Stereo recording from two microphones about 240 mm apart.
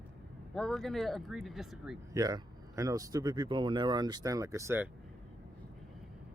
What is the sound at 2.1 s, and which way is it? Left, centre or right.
Speech, centre.